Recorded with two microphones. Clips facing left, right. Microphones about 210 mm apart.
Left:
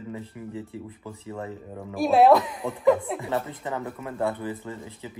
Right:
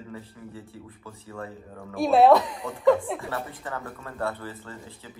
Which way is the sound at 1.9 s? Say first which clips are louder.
Even; centre (ahead or behind).